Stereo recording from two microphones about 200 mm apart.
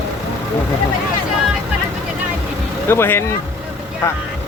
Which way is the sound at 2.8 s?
10° left (ahead or behind).